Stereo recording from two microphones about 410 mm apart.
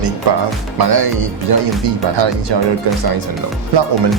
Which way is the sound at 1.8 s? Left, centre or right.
Right.